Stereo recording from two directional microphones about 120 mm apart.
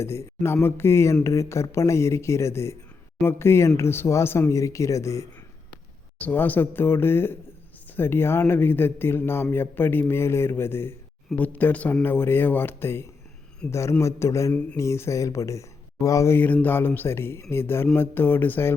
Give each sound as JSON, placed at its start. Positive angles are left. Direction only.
{"t": 0.0, "sound": "speech", "side_deg": 20}
{"t": 6.1, "sound": "speech", "side_deg": 15}